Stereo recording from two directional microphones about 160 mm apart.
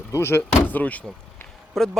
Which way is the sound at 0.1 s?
15° left (ahead or behind).